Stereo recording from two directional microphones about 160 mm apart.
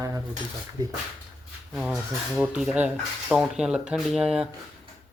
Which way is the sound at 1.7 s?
5° right (ahead or behind).